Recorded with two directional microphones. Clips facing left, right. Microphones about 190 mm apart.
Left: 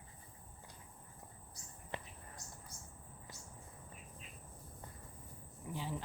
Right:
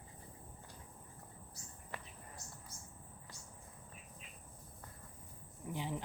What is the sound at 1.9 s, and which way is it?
Whispering, 25° left (ahead or behind).